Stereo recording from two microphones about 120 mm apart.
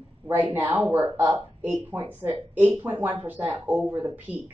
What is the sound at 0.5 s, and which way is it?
A woman's voice, 15° right (ahead or behind).